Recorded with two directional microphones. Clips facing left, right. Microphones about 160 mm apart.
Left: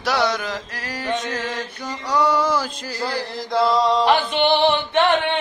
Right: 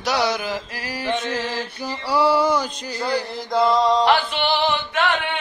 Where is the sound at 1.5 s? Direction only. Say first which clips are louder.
Right 1 dB; 25° right (ahead or behind).